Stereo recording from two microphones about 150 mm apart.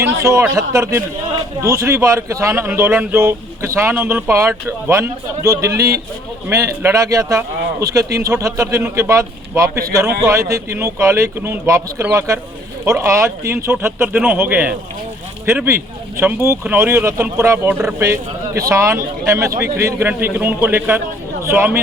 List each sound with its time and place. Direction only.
0.0 s a man's voice: 20° right (ahead or behind)